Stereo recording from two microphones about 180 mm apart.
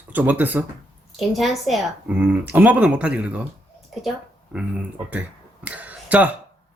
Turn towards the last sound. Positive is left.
turn(degrees=-10)  # may be behind; listen again after turning